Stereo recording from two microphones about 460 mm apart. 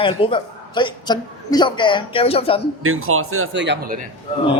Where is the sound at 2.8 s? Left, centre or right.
Right.